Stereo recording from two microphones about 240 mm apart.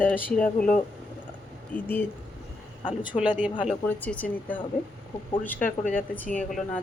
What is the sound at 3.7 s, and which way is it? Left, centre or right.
Speech, centre.